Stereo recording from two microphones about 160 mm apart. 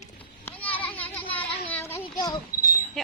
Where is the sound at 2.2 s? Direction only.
20° left (ahead or behind).